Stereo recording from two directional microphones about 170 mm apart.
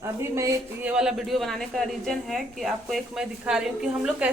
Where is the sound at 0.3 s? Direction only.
15° right (ahead or behind).